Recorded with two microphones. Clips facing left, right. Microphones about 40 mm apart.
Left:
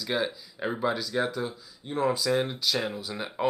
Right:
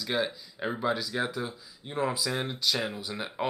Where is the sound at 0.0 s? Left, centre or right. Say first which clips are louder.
Left 1 dB; centre.